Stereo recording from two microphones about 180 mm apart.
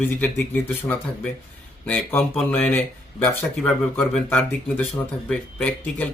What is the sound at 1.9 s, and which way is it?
Speech, 10° left (ahead or behind).